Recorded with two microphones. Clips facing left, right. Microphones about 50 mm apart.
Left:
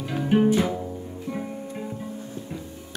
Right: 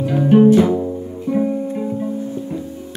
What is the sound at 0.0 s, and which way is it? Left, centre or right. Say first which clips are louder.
Music: right 10 dB; centre.